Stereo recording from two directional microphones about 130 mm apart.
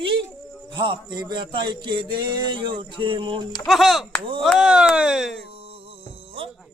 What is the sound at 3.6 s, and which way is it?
Speech, centre (ahead or behind).